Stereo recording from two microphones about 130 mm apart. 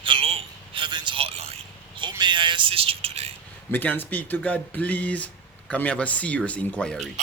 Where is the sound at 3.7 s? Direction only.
15° left (ahead or behind).